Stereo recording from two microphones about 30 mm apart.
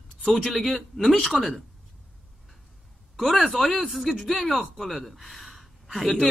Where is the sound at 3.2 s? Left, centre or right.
Centre.